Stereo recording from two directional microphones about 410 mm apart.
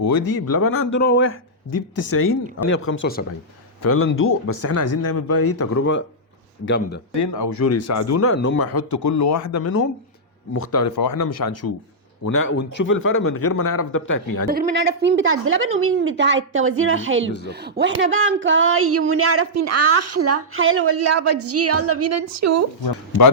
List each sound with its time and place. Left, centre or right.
0.3 s a man's voice: left
7.2 s a man's voice: left
14.4 s a woman's voice: right